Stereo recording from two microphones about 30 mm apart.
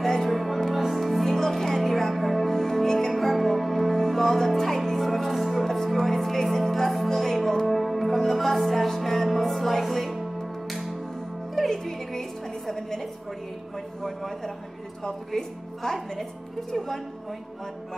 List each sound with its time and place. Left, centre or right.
0.0 s music: centre
11.7 s music: centre
14.0 s a sound: centre
15.3 s speech: centre